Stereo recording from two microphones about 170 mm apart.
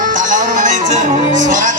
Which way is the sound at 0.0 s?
50° right (ahead or behind).